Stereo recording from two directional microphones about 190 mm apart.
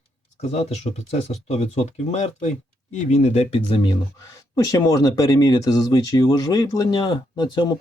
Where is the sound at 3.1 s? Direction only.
35° left (ahead or behind).